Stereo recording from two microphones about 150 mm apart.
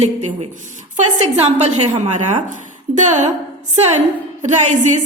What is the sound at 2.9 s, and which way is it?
Speech, 55° right (ahead or behind).